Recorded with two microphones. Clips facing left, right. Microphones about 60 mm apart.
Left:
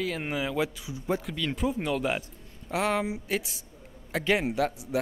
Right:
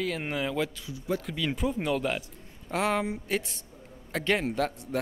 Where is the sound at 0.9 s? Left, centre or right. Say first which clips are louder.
Left 1 dB; left.